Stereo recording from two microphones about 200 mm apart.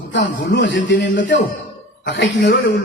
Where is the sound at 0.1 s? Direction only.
60° left (ahead or behind).